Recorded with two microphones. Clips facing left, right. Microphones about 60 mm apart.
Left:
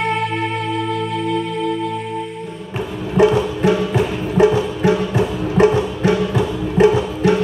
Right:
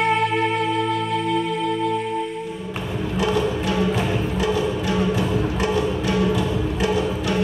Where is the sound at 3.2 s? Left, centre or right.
Left.